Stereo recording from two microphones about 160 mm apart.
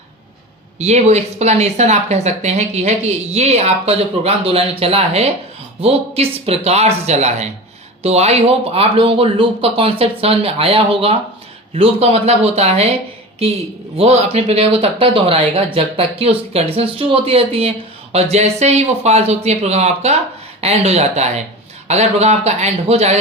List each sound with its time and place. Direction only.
0.8 s speech: 45° right (ahead or behind)
13.9 s speech: 40° right (ahead or behind)